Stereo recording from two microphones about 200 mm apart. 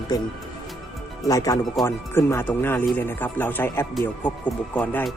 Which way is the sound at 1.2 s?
15° left (ahead or behind).